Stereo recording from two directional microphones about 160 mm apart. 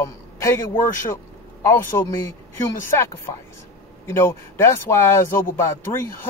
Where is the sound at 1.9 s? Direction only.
20° left (ahead or behind).